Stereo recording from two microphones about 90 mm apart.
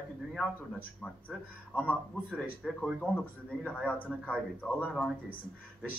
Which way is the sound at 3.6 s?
15° left (ahead or behind).